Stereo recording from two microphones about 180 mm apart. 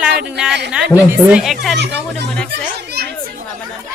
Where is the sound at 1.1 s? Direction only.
5° right (ahead or behind).